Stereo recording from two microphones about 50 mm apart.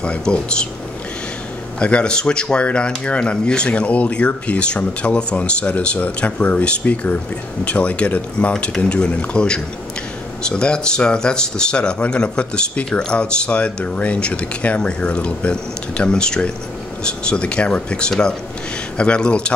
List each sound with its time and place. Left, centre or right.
0.0 s speech: left
1.8 s speech: left